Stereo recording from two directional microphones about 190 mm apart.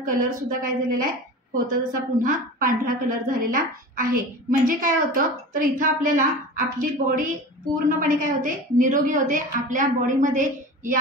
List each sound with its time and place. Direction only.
0.0 s a woman's voice: 45° right (ahead or behind)